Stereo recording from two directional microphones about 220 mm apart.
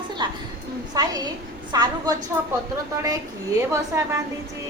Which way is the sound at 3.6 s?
15° right (ahead or behind).